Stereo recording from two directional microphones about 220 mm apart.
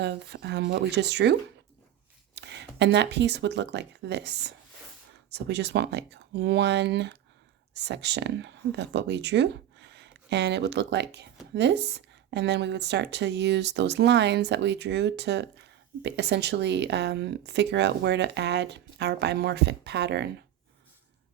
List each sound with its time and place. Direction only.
0.0 s speech: 50° right (ahead or behind)